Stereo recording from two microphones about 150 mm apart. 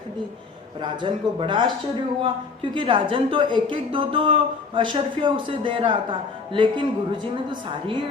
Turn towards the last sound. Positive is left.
turn(degrees=-35)  # may be behind; listen again after turning